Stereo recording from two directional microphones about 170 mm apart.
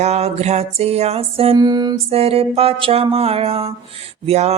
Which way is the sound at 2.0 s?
35° right (ahead or behind).